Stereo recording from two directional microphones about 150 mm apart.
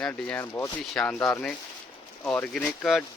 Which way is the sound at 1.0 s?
5° left (ahead or behind).